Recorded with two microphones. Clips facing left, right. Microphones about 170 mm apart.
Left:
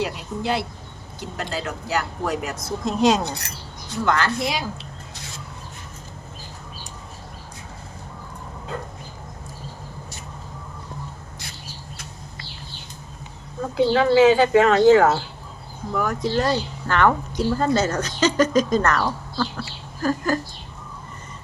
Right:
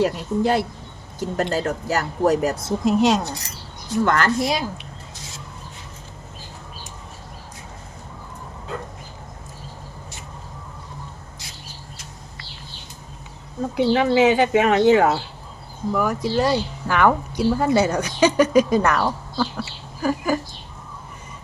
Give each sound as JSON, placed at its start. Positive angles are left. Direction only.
{"t": 0.0, "sound": "speech", "side_deg": -45}
{"t": 2.8, "sound": "speech", "side_deg": 0}
{"t": 4.0, "sound": "speech", "side_deg": -50}
{"t": 13.7, "sound": "speech", "side_deg": -20}